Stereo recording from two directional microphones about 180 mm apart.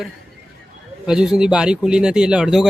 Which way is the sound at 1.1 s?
5° right (ahead or behind).